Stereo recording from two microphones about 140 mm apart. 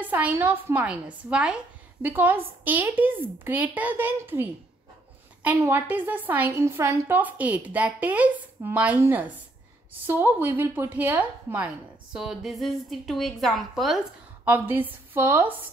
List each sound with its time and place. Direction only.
0.0 s a woman's voice: 10° right (ahead or behind)
5.6 s a woman's voice: 15° right (ahead or behind)
14.4 s a woman's voice: 15° right (ahead or behind)